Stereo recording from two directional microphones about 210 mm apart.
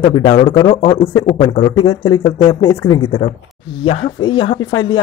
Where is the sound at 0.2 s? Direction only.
25° left (ahead or behind).